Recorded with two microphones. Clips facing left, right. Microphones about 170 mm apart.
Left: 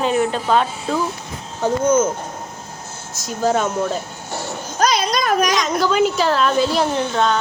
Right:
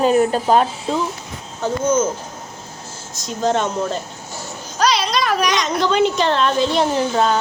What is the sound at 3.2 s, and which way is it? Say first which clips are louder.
Speech: even; 5° left (ahead or behind).